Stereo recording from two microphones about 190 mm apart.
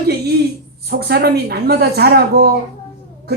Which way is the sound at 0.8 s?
55° right (ahead or behind).